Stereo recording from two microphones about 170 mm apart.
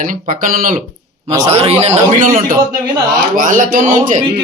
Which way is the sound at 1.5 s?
35° right (ahead or behind).